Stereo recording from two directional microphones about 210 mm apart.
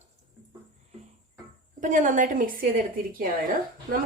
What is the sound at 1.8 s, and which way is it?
A woman's voice, 35° right (ahead or behind).